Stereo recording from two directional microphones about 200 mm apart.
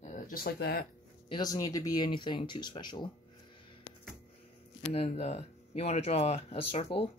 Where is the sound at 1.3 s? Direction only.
20° left (ahead or behind).